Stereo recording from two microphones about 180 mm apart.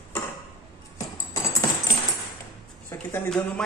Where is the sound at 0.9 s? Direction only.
20° left (ahead or behind).